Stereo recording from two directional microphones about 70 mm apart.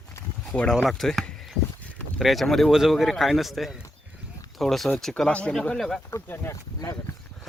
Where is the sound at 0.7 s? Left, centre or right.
Centre.